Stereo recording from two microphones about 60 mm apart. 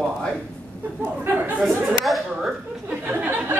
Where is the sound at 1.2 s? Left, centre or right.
Right.